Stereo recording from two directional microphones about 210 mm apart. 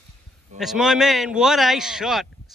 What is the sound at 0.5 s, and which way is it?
A man's voice, centre (ahead or behind).